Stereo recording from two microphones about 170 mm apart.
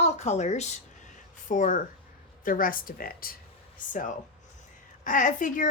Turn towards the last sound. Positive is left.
turn(degrees=50)  # may be behind; listen again after turning